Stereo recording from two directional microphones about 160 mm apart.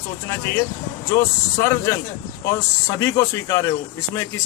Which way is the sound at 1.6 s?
20° left (ahead or behind).